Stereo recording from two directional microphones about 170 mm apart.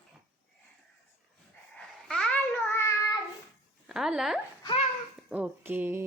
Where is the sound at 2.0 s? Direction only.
5° left (ahead or behind).